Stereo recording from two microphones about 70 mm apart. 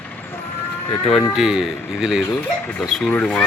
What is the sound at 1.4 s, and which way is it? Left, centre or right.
Speech, centre.